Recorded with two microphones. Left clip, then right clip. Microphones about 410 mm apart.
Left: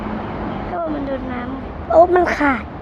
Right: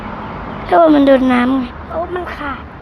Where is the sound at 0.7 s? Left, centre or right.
Right.